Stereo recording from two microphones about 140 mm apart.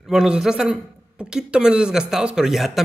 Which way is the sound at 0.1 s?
5° right (ahead or behind).